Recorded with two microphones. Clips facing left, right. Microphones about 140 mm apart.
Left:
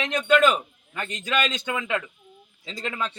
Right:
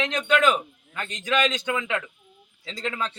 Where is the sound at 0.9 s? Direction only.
15° left (ahead or behind).